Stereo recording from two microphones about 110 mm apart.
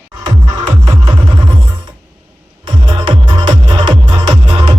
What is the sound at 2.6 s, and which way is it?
Music, 45° right (ahead or behind).